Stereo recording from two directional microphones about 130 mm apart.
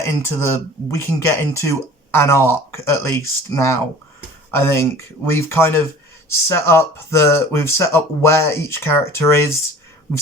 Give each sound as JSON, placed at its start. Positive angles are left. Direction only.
{"t": 0.0, "sound": "speech", "side_deg": 20}